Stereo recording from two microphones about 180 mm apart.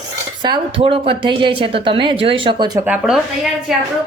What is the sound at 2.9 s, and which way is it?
Speech, 5° right (ahead or behind).